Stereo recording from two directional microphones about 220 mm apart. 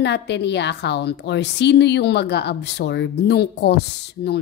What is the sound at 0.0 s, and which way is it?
A woman's voice, 50° left (ahead or behind).